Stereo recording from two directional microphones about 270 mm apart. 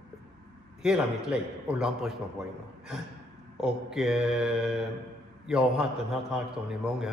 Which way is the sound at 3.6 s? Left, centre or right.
Centre.